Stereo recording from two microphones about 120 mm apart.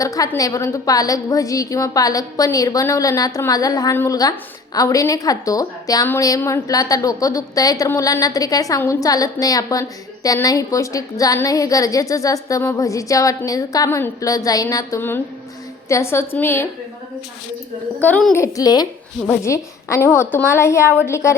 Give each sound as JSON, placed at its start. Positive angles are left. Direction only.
{"t": 0.0, "sound": "a woman's voice", "side_deg": 30}
{"t": 18.0, "sound": "a child's voice", "side_deg": 15}
{"t": 18.3, "sound": "a woman's voice", "side_deg": 25}